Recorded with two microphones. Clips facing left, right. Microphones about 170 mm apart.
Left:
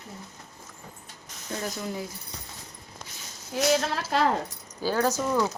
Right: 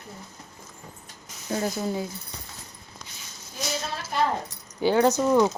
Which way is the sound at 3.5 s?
90° left.